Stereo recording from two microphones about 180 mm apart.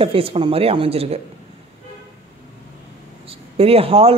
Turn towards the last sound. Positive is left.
turn(degrees=-35)  # may be behind; listen again after turning